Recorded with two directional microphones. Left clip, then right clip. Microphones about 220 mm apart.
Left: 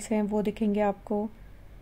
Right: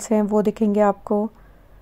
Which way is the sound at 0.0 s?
20° right (ahead or behind).